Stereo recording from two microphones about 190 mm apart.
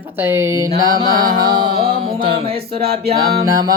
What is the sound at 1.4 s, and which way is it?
Music, 25° right (ahead or behind).